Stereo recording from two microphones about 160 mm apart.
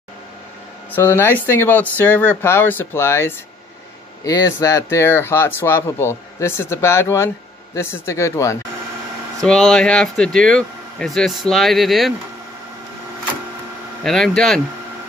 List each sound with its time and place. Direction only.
0.9 s speech: 15° left (ahead or behind)
9.4 s speech: 5° left (ahead or behind)
14.0 s speech: 5° left (ahead or behind)